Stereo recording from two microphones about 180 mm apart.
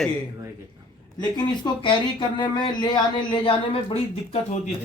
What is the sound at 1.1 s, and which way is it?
Speech, 25° left (ahead or behind).